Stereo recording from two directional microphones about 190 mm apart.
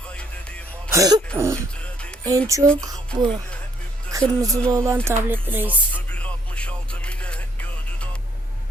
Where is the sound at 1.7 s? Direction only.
5° left (ahead or behind).